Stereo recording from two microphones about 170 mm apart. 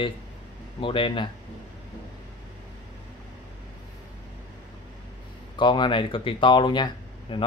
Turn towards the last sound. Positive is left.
turn(degrees=25)  # may be behind; listen again after turning